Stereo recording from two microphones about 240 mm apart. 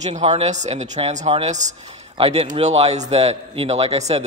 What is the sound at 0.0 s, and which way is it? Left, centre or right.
A man's voice, right.